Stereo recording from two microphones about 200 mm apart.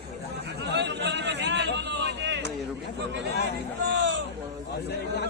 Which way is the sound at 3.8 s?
60° right (ahead or behind).